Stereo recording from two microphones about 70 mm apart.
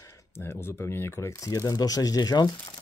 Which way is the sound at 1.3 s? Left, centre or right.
Left.